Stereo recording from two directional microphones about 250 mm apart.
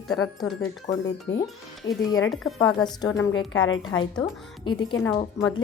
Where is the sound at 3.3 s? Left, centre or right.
Left.